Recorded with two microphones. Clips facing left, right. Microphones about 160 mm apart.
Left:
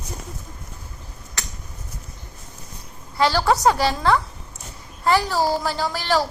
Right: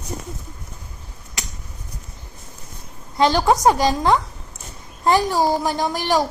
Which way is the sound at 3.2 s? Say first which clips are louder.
Right 2 dB; 20° right (ahead or behind).